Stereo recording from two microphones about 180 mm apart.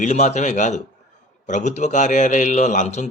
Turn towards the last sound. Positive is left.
turn(degrees=40)  # may be behind; listen again after turning